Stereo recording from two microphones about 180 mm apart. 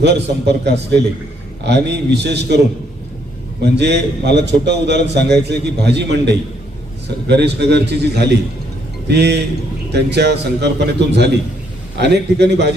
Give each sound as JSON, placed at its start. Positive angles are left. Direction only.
{"t": 0.0, "sound": "a man's voice", "side_deg": -70}
{"t": 3.8, "sound": "a man's voice", "side_deg": -70}